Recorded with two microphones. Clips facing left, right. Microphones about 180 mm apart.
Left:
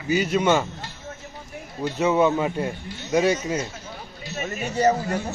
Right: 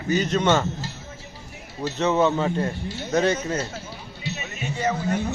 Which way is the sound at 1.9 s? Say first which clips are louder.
Left 1 dB; 10° left (ahead or behind).